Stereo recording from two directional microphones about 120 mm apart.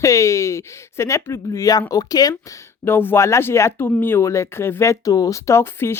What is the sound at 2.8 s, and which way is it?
Speech, 20° left (ahead or behind).